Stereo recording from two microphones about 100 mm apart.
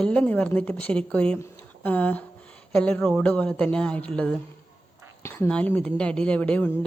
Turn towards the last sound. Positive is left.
turn(degrees=15)  # may be behind; listen again after turning